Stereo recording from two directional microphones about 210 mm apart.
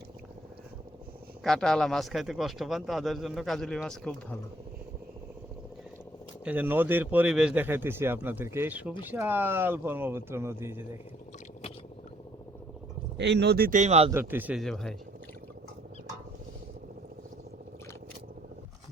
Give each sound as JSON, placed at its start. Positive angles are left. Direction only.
{"t": 1.5, "sound": "speech", "side_deg": 5}
{"t": 6.4, "sound": "speech", "side_deg": -5}
{"t": 13.1, "sound": "speech", "side_deg": -55}
{"t": 14.1, "sound": "speech", "side_deg": -10}